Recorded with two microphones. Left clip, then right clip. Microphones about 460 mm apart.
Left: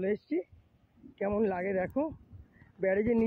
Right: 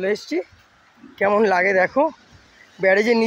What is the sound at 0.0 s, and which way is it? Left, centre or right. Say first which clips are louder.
Speech: right 10 dB; left.